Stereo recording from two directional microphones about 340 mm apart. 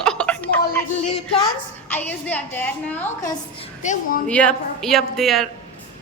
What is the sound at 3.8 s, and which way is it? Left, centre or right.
Speech, left.